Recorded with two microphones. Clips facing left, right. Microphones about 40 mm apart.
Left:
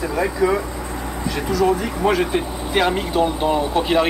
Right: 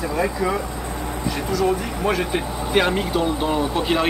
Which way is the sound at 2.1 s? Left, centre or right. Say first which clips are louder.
Left 3 dB; centre.